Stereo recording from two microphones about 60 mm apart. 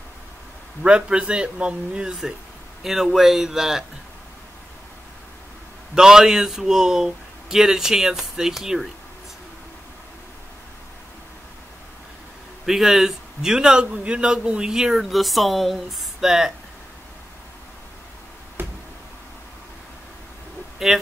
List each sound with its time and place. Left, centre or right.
0.8 s a man's voice: centre
2.8 s speech: centre
5.9 s a man's voice: centre
12.6 s a man's voice: centre
18.6 s a sound: right
20.8 s speech: centre